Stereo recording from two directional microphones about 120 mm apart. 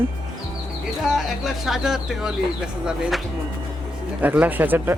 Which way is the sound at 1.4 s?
Centre (ahead or behind).